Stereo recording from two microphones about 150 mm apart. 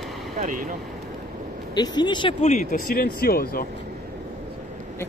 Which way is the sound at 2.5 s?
65° left (ahead or behind).